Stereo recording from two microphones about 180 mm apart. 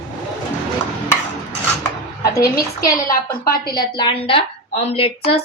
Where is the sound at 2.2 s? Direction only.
20° left (ahead or behind).